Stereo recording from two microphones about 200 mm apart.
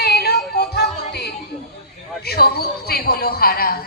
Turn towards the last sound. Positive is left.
turn(degrees=50)  # may be behind; listen again after turning